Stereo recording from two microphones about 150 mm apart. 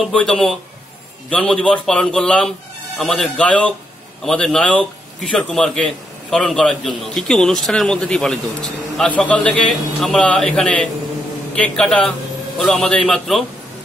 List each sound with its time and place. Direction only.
0.0 s a man's voice: 5° left (ahead or behind)